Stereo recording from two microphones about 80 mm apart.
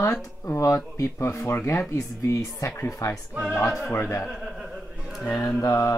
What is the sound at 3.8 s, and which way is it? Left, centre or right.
Speech, left.